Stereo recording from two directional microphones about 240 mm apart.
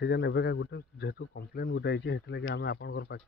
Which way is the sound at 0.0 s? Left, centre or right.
Left.